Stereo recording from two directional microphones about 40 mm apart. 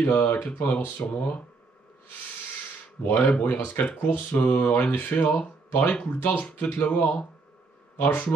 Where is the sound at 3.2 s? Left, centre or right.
Left.